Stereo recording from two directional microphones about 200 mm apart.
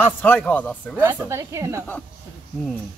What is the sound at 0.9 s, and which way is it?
Speech, 10° right (ahead or behind).